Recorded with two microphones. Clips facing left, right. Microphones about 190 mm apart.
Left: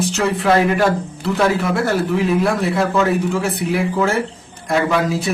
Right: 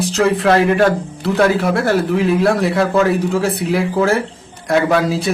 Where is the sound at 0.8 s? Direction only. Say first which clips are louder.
Right 3 dB; 75° right (ahead or behind).